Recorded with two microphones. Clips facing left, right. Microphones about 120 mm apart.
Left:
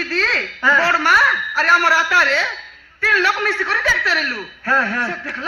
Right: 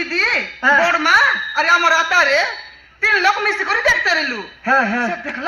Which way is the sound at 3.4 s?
80° right.